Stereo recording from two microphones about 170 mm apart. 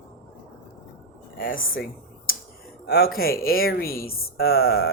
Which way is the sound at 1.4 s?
55° left (ahead or behind).